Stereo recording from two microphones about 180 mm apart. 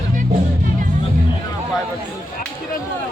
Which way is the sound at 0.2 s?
50° right (ahead or behind).